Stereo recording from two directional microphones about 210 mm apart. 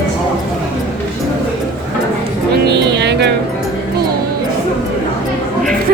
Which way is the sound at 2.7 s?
55° right (ahead or behind).